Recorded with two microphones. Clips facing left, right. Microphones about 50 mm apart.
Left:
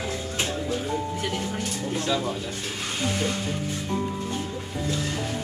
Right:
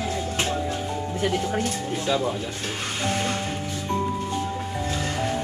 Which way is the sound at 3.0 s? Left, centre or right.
Right.